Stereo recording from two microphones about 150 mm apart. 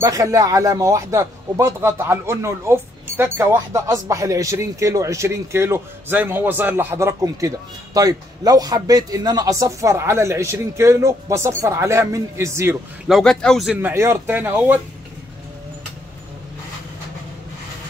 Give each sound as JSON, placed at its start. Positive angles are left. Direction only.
{"t": 0.0, "sound": "a man's voice", "side_deg": -20}
{"t": 13.0, "sound": "speech", "side_deg": 0}
{"t": 13.7, "sound": "speech", "side_deg": -15}